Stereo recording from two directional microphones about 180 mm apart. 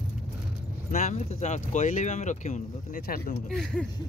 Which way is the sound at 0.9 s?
40° left (ahead or behind).